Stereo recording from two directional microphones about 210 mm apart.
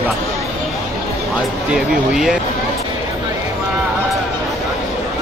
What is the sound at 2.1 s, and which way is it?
Speech, centre (ahead or behind).